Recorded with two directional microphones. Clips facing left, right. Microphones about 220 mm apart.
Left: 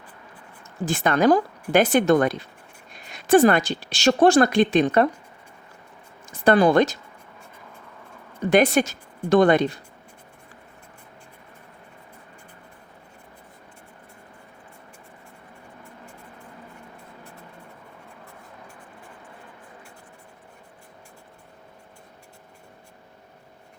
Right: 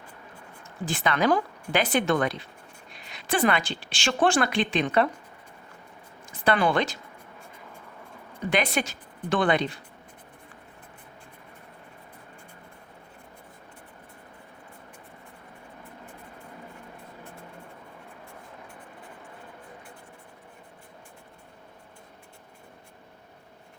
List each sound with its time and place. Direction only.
0.9 s speech: 45° left (ahead or behind)
6.2 s speech: 45° left (ahead or behind)
8.4 s speech: 45° left (ahead or behind)